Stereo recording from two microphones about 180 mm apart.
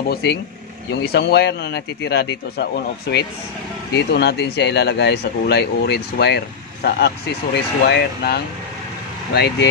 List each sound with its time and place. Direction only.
0.1 s a man's voice: 65° left (ahead or behind)